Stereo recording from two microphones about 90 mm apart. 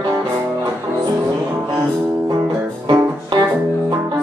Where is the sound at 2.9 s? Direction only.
55° right (ahead or behind).